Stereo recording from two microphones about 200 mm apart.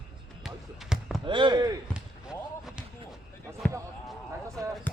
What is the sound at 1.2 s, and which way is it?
Speech, 25° right (ahead or behind).